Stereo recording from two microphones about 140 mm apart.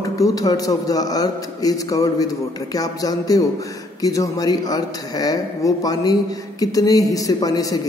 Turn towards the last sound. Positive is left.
turn(degrees=25)  # may be behind; listen again after turning